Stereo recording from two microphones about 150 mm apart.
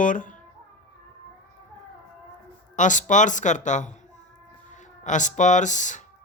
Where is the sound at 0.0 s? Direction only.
60° left (ahead or behind).